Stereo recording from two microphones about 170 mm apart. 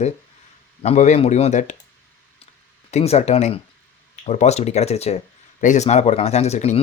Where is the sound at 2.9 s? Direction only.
40° left (ahead or behind).